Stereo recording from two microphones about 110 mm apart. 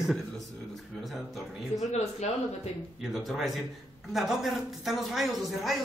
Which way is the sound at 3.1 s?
Centre (ahead or behind).